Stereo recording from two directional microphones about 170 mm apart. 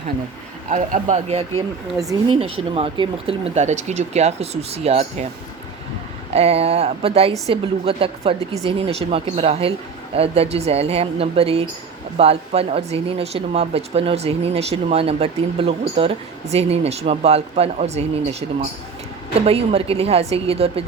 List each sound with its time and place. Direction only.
0.7 s speech: 45° right (ahead or behind)
6.3 s speech: 35° right (ahead or behind)
19.5 s speech: 35° right (ahead or behind)